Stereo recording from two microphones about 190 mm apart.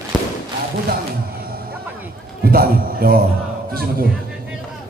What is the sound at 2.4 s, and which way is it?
A man's voice, 50° right (ahead or behind).